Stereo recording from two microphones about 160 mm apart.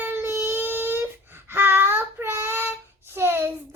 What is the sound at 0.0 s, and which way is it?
Child singing, 15° right (ahead or behind).